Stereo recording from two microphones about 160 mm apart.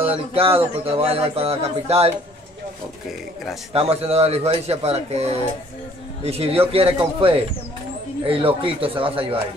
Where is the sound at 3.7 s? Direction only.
40° right (ahead or behind).